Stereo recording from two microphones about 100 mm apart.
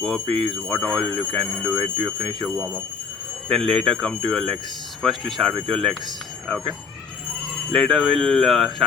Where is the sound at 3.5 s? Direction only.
5° left (ahead or behind).